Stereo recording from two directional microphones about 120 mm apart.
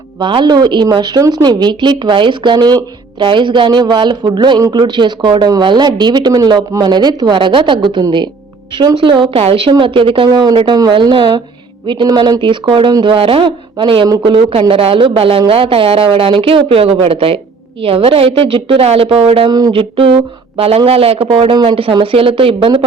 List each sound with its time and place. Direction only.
0.2 s speech: 40° right (ahead or behind)
19.5 s speech: 35° right (ahead or behind)
19.7 s speech: 50° right (ahead or behind)